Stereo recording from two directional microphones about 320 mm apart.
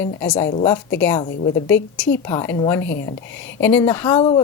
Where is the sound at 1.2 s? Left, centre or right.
Left.